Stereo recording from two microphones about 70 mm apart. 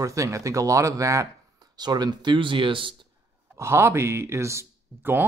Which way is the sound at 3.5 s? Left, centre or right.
Right.